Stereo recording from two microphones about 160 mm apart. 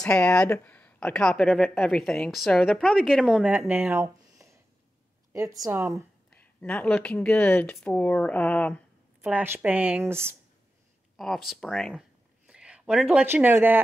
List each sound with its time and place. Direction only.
0.0 s a woman's voice: 5° left (ahead or behind); by 6.0 s 15° right (ahead or behind)
6.3 s speech: 10° left (ahead or behind)
9.2 s speech: 10° right (ahead or behind)
11.1 s speech: centre (ahead or behind)